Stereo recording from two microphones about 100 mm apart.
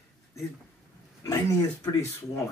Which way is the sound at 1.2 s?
35° left (ahead or behind).